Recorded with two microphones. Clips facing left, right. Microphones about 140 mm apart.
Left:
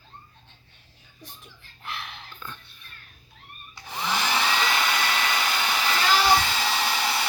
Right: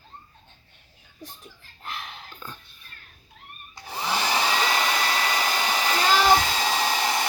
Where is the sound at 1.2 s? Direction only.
45° right (ahead or behind).